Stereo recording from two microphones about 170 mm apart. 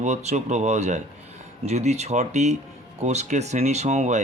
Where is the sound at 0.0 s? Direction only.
40° right (ahead or behind).